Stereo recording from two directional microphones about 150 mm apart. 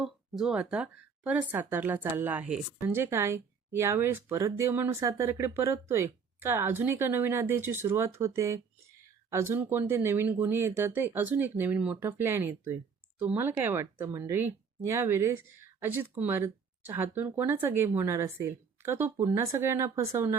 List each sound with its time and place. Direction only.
0.0 s speech: 5° right (ahead or behind)